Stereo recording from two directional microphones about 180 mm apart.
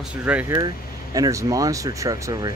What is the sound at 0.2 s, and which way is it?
Speech, 10° right (ahead or behind).